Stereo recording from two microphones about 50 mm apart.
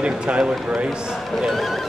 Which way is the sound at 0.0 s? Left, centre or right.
Right.